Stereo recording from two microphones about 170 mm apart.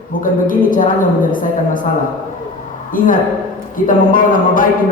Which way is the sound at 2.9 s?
50° left (ahead or behind).